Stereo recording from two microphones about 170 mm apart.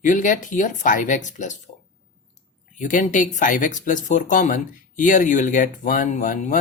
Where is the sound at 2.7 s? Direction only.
50° left (ahead or behind).